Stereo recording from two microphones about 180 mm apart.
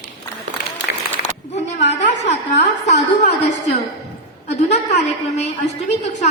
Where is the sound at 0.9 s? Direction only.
55° left (ahead or behind).